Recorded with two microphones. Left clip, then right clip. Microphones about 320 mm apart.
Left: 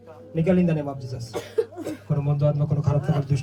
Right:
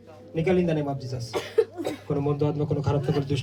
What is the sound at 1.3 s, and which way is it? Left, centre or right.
Speech, centre.